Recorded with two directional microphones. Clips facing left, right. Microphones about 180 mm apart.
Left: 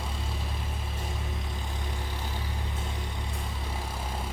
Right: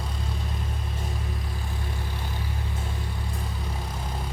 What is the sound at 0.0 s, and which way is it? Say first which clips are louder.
Vehicle: right 2 dB; 5° left (ahead or behind).